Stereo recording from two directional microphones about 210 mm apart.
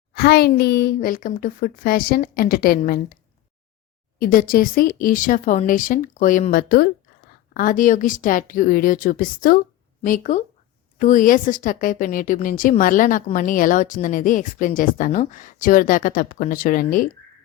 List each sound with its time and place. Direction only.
0.1 s a woman's voice: 50° left (ahead or behind)
4.2 s a woman's voice: 40° left (ahead or behind)